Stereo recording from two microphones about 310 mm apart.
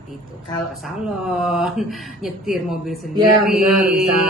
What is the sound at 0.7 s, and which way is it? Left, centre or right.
Speech, centre.